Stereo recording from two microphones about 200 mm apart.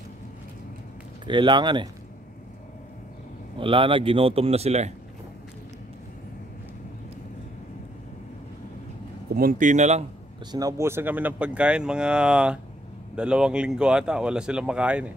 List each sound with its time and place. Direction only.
1.2 s speech: 25° right (ahead or behind)
3.5 s speech: 25° right (ahead or behind)
9.3 s speech: 45° right (ahead or behind)
10.5 s speech: 15° right (ahead or behind)